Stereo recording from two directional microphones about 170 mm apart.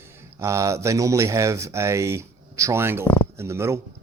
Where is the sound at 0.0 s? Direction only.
15° right (ahead or behind).